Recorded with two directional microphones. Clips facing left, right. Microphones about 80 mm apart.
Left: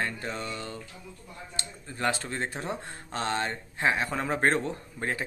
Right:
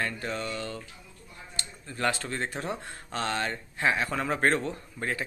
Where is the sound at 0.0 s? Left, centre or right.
Left.